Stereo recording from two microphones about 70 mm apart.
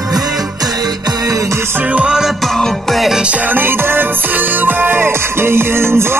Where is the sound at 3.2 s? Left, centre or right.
Centre.